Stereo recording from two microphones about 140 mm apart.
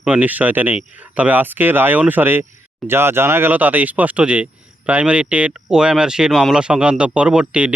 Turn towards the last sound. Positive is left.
turn(degrees=-10)  # may be behind; listen again after turning